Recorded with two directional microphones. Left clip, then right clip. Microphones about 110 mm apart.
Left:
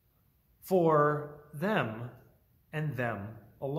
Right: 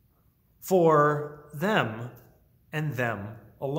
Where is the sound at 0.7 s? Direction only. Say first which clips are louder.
Right 5 dB; 15° right (ahead or behind).